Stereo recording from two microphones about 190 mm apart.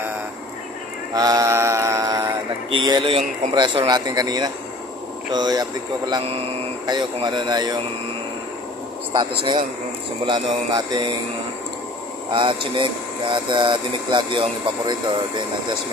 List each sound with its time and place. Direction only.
1.1 s mantra: 20° right (ahead or behind)
3.5 s speech: 25° right (ahead or behind)
10.2 s speech: 20° right (ahead or behind)
12.3 s speech: 25° right (ahead or behind)